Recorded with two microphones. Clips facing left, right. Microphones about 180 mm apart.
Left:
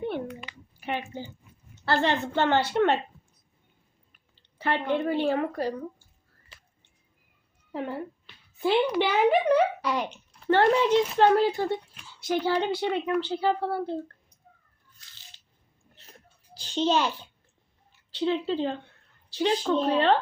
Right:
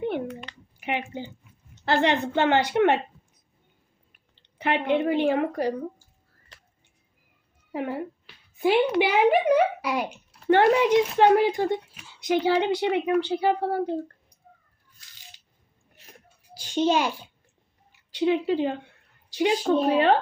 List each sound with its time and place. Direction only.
0.8 s speech: 15° right (ahead or behind)
4.4 s a sound: 20° right (ahead or behind)
4.9 s speech: 15° right (ahead or behind)
7.7 s a woman's voice: 10° right (ahead or behind)
16.0 s a sound: 10° right (ahead or behind)
18.1 s speech: 10° right (ahead or behind)